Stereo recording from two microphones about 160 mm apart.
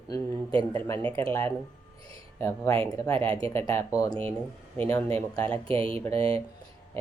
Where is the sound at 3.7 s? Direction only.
20° left (ahead or behind).